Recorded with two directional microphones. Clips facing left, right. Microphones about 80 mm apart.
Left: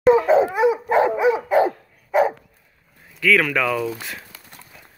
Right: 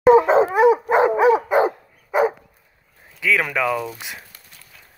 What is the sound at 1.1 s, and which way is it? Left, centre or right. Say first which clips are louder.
Dog: right 3 dB; right.